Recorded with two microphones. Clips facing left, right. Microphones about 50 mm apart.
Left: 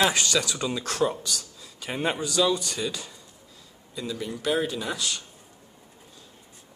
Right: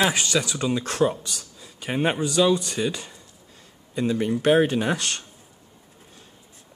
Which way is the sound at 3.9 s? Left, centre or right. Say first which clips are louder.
Right 9 dB; right.